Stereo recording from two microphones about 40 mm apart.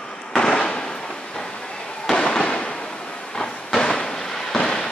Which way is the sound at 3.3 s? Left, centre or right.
Centre.